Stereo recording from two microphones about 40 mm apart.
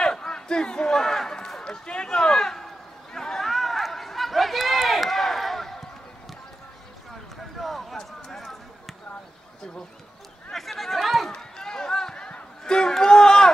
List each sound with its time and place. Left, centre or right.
0.0 s crowd: centre
0.9 s speech: centre
1.6 s a sound: left
7.5 s basketball bounce: centre
10.5 s chatter: centre
11.3 s run: centre
12.3 s a sound: left
12.7 s music: centre